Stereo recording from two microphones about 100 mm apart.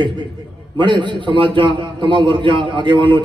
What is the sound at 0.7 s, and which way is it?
A man's voice, 55° right (ahead or behind).